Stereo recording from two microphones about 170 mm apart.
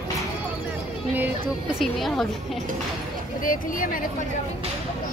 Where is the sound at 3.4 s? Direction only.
55° left (ahead or behind).